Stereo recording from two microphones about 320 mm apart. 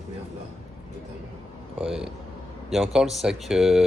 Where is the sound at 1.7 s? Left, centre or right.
Centre.